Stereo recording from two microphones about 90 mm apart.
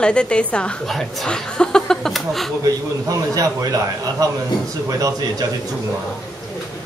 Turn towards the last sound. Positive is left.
turn(degrees=-40)  # may be behind; listen again after turning